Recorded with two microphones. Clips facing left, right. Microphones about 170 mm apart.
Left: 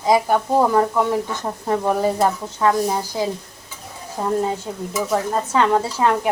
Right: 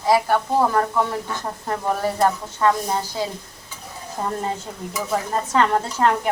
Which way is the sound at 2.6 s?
5° left (ahead or behind).